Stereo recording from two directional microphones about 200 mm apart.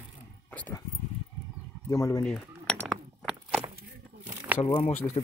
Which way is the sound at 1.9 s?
15° left (ahead or behind).